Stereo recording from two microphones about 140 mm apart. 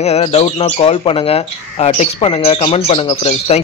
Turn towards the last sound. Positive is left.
turn(degrees=50)  # may be behind; listen again after turning